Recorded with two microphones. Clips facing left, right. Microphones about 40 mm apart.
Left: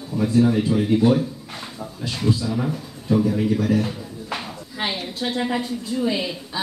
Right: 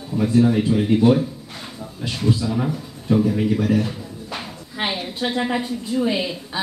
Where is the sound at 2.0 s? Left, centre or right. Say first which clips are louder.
Right 1 dB; centre.